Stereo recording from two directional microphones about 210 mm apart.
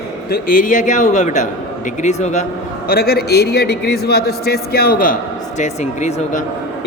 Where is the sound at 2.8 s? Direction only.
45° left (ahead or behind).